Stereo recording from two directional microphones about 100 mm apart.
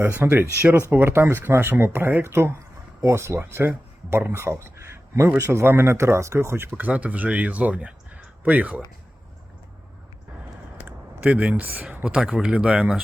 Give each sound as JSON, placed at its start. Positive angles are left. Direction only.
{"t": 0.0, "sound": "speech", "side_deg": -20}
{"t": 11.3, "sound": "speech", "side_deg": -15}